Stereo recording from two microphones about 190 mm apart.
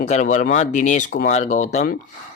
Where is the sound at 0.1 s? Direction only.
40° left (ahead or behind).